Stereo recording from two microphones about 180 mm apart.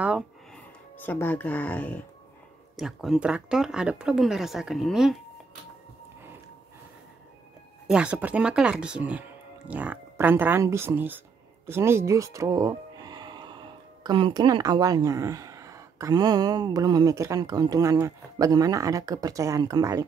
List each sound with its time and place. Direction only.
0.9 s speech: 10° left (ahead or behind)
2.7 s speech: centre (ahead or behind)
7.8 s speech: 5° right (ahead or behind)